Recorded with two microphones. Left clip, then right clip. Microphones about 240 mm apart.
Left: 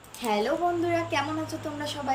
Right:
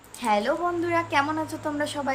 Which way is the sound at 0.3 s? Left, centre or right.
Centre.